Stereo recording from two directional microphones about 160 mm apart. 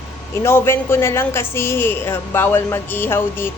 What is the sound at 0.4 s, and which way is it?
Speech, 15° left (ahead or behind).